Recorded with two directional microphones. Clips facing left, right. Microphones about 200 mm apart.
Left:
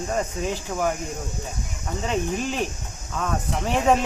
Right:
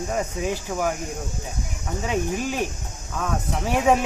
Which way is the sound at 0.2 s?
10° right (ahead or behind).